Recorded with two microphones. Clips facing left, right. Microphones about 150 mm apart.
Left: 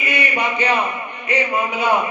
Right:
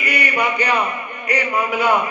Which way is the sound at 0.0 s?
25° left (ahead or behind).